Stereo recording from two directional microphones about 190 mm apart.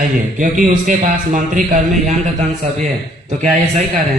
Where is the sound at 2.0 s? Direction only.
35° right (ahead or behind).